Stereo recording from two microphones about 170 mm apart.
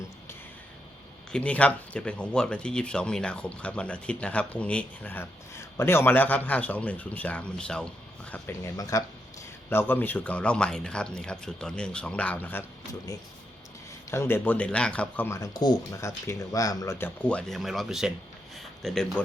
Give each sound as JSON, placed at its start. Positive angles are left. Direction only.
{"t": 1.3, "sound": "speech", "side_deg": 10}
{"t": 14.1, "sound": "speech", "side_deg": 15}
{"t": 17.2, "sound": "speech", "side_deg": 5}